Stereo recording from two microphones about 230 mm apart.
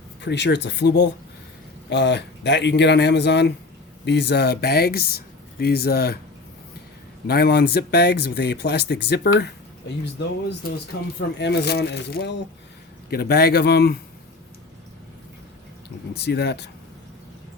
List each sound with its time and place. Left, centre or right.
0.2 s speech: left
7.3 s speech: left
11.2 s speech: left
16.1 s speech: left